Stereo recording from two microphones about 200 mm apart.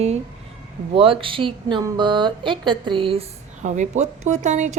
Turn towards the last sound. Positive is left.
turn(degrees=-35)  # may be behind; listen again after turning